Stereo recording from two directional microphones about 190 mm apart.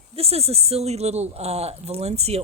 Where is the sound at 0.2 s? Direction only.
30° right (ahead or behind).